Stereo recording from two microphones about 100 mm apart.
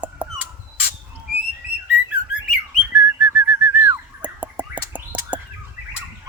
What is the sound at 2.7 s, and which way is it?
Whistling, 15° right (ahead or behind).